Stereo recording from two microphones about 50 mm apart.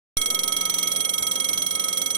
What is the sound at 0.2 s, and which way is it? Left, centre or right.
Telephone, left.